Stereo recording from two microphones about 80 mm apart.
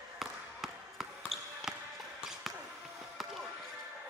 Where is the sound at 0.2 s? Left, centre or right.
Centre.